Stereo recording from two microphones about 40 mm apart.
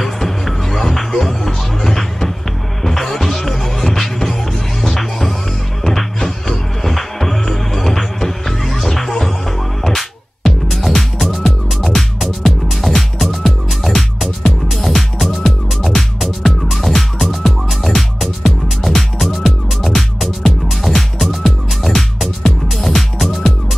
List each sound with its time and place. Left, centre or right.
0.0 s music: centre